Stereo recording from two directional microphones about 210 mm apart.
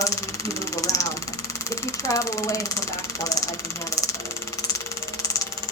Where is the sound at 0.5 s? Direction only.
15° left (ahead or behind).